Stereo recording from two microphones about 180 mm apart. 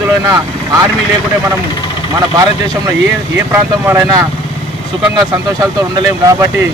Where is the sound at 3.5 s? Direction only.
20° right (ahead or behind).